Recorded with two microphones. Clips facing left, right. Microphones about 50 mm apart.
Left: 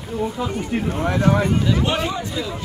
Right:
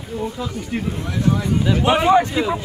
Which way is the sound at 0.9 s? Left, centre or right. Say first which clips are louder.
Left 3 dB; left.